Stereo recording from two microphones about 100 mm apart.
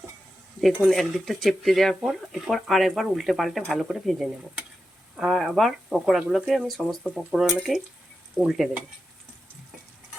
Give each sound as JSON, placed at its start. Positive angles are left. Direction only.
{"t": 0.9, "sound": "speech", "side_deg": 0}